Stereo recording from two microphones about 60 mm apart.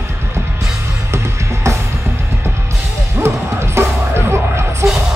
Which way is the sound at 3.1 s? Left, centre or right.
Right.